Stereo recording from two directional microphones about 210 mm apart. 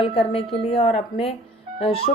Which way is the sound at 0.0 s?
25° left (ahead or behind).